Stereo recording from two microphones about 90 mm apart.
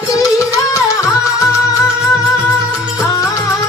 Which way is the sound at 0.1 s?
35° left (ahead or behind).